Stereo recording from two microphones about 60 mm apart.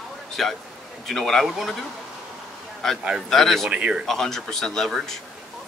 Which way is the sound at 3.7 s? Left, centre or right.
Centre.